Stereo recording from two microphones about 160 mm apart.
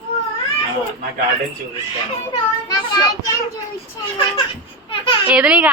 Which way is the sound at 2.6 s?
25° left (ahead or behind).